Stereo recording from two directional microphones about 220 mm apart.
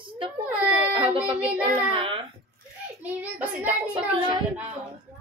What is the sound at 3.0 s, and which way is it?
Speech, 5° right (ahead or behind).